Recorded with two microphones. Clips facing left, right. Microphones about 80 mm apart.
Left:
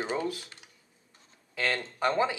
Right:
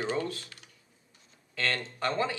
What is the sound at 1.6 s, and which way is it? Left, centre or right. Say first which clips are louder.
Speech: left 2 dB; centre.